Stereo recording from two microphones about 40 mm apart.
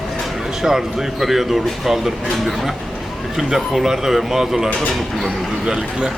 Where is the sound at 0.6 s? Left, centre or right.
Centre.